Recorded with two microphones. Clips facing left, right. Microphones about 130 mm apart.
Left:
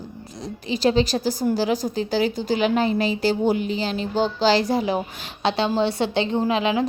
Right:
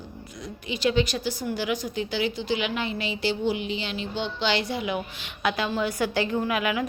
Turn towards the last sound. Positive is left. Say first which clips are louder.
# left 5 dB
turn(degrees=25)  # may be behind; listen again after turning